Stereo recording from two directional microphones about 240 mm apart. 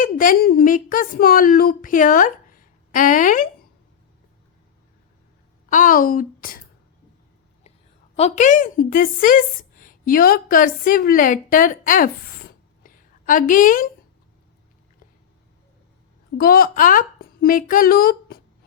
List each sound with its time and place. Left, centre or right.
0.0 s speech: left
5.7 s a woman's voice: left
8.1 s a woman's voice: left
16.4 s speech: left